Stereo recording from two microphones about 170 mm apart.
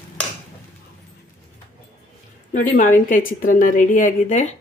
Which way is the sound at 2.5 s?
55° left (ahead or behind).